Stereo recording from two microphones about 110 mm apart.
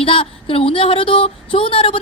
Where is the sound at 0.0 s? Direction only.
55° left (ahead or behind).